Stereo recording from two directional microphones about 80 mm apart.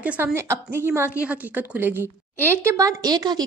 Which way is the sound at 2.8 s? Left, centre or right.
Right.